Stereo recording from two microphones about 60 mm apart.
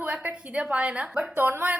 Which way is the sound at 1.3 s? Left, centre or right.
Right.